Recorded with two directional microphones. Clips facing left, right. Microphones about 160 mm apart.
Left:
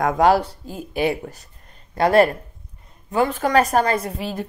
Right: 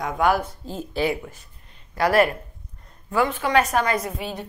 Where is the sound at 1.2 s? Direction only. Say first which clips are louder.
Left 4 dB; 40° left (ahead or behind).